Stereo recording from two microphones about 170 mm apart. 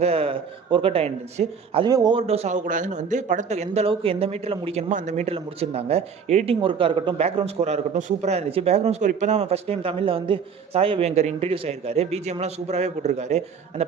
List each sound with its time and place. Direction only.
0.0 s speech: 35° right (ahead or behind)
1.9 s a man's voice: 25° right (ahead or behind)
2.2 s speech: 35° right (ahead or behind)